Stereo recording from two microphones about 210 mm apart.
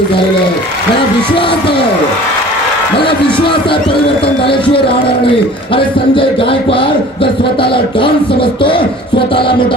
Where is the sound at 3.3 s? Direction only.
25° left (ahead or behind).